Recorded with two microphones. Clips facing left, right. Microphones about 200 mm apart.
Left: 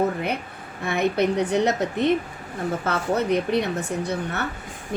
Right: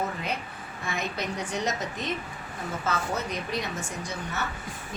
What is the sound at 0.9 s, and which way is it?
A woman's voice, 60° left (ahead or behind).